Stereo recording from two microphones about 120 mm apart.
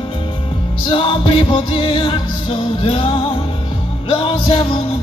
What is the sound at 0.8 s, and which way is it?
Music, 45° left (ahead or behind).